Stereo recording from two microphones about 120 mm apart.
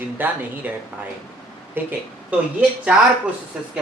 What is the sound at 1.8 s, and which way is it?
Speech, 15° right (ahead or behind).